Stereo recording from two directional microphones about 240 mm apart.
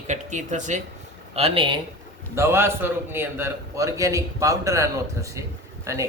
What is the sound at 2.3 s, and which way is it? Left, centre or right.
Speech, centre.